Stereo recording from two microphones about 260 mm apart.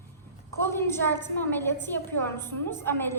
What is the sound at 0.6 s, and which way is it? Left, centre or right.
A woman's voice, centre.